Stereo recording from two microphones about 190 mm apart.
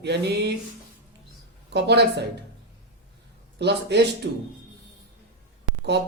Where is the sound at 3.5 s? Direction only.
65° right (ahead or behind).